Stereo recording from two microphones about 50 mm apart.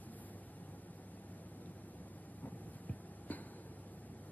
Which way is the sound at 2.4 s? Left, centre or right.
Left.